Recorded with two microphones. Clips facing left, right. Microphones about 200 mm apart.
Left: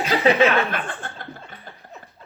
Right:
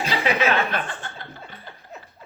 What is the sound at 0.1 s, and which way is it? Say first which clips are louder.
Chuckle: left 5 dB; 50° left (ahead or behind).